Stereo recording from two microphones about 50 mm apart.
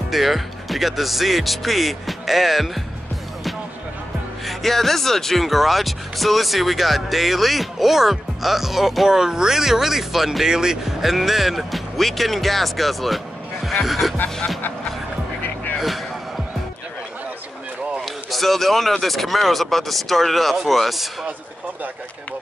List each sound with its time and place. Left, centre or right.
0.1 s speech: centre
4.5 s speech: centre
15.4 s music: left
18.0 s speech: centre